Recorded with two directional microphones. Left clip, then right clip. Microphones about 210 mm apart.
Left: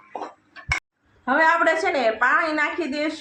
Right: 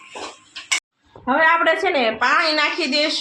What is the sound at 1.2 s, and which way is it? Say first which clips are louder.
A woman's voice: right 2 dB; 30° right (ahead or behind).